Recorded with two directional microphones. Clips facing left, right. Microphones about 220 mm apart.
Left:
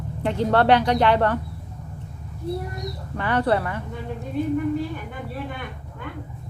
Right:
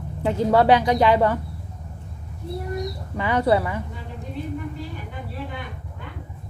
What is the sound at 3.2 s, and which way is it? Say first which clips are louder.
Speech: right 2 dB; 10° right (ahead or behind).